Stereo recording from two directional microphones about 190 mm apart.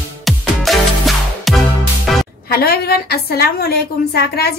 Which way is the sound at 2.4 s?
55° left (ahead or behind).